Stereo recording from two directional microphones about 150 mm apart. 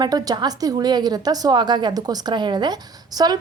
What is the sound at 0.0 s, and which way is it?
Speech, 25° right (ahead or behind).